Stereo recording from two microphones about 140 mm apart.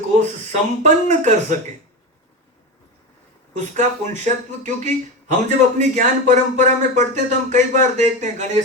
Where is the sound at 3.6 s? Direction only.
60° right (ahead or behind).